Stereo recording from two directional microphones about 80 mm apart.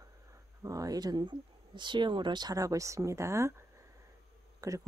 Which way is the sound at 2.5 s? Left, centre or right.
Right.